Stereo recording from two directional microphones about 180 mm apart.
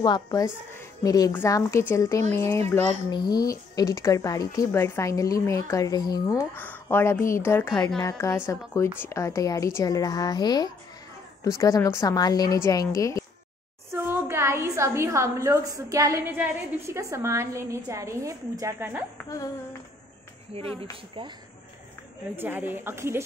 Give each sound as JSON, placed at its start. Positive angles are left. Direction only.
{"t": 0.0, "sound": "a woman's voice", "side_deg": 20}
{"t": 13.9, "sound": "a woman's voice", "side_deg": -15}
{"t": 19.2, "sound": "speech", "side_deg": 20}
{"t": 20.5, "sound": "speech", "side_deg": -35}
{"t": 22.3, "sound": "a woman's voice", "side_deg": -10}